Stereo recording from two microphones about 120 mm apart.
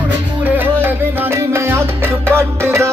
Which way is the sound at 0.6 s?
20° right (ahead or behind).